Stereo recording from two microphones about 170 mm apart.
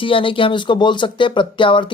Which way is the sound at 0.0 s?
30° left (ahead or behind).